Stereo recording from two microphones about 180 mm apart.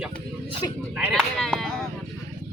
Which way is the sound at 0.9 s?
5° right (ahead or behind).